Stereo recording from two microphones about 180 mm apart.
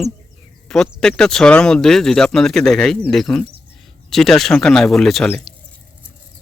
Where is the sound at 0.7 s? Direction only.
5° left (ahead or behind).